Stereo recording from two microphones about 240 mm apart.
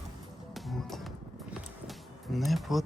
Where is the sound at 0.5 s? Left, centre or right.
Centre.